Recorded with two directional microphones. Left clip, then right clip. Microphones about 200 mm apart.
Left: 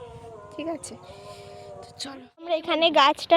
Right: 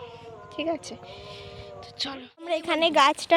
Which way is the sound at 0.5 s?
5° left (ahead or behind).